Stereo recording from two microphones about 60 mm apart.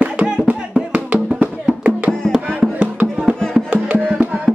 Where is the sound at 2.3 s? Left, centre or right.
Centre.